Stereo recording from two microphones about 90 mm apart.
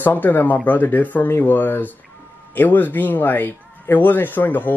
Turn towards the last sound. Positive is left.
turn(degrees=20)  # may be behind; listen again after turning